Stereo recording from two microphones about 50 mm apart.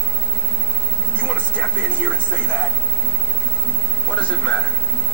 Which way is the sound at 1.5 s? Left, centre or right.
Right.